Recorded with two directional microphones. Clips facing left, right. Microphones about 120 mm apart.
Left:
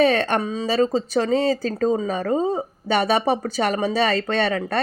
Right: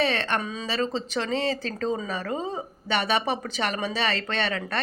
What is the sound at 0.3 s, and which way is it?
Speech, 30° left (ahead or behind).